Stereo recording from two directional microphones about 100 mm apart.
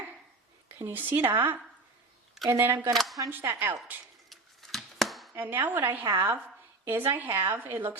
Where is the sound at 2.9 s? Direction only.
Centre (ahead or behind).